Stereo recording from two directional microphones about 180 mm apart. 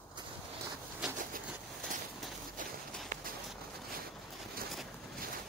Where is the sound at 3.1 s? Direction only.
50° right (ahead or behind).